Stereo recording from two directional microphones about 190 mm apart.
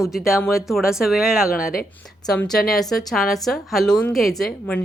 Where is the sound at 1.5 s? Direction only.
50° left (ahead or behind).